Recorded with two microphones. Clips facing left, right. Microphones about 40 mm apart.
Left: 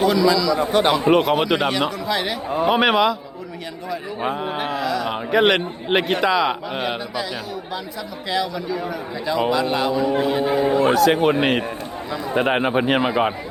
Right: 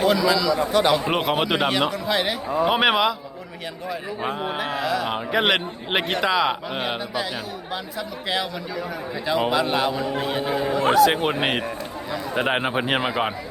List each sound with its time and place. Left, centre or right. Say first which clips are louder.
0.0 s speech: left 2 dB; centre
0.5 s a man's voice: left 2 dB; left
1.1 s a man's voice: left 5 dB; centre
4.8 s a man's voice: left 1 dB; centre
8.3 s a man's voice: left 4 dB; centre
10.6 s speech: left 5 dB; left
10.9 s a man's voice: left 2 dB; centre